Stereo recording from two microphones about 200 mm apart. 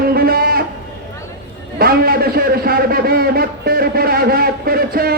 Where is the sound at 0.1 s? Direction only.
50° right (ahead or behind).